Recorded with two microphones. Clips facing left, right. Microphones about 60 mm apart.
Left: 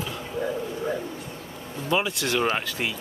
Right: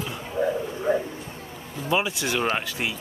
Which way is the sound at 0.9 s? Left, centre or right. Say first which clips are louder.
Right 9 dB; right.